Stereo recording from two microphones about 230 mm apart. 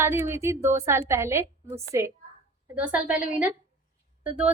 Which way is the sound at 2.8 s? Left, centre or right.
Centre.